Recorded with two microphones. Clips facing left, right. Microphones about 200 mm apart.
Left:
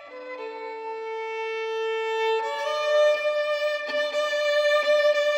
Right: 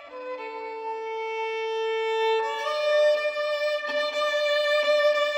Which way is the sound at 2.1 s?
15° left (ahead or behind).